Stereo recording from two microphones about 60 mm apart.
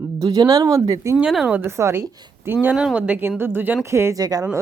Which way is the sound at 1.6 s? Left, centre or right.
Right.